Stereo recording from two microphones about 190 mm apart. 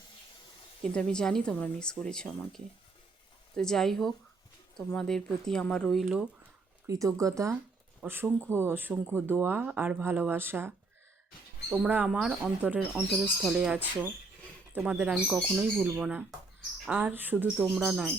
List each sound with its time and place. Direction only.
0.9 s speech: 5° left (ahead or behind)
3.6 s speech: centre (ahead or behind)
6.8 s speech: 15° right (ahead or behind); by 18.1 s centre (ahead or behind)